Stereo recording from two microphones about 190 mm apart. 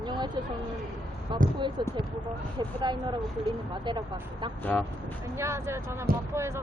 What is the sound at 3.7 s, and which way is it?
Speech, 25° right (ahead or behind).